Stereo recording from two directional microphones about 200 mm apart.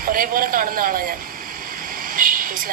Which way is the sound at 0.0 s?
45° right (ahead or behind).